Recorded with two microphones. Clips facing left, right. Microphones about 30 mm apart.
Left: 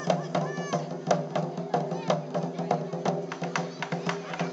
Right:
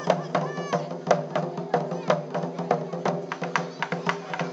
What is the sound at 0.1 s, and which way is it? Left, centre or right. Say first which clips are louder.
Music: right 3 dB; centre.